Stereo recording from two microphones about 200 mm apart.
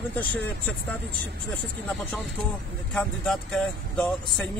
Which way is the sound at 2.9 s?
5° left (ahead or behind).